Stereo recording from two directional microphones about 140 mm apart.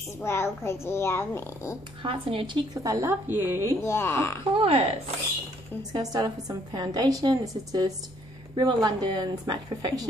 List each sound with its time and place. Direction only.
0.2 s a child's voice: 20° left (ahead or behind)
2.0 s a woman's voice: 40° right (ahead or behind); by 3.7 s 15° right (ahead or behind)
3.8 s speech: 20° left (ahead or behind)
4.6 s speech: 45° right (ahead or behind)
5.8 s a woman's voice: 30° right (ahead or behind)